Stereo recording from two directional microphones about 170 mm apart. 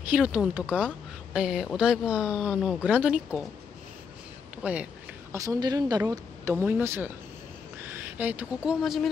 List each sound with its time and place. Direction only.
0.1 s speech: 5° right (ahead or behind)
4.6 s speech: 10° right (ahead or behind)